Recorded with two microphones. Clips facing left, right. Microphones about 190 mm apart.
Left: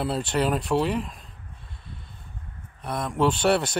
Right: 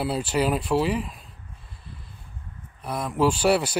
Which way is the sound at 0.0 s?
5° right (ahead or behind).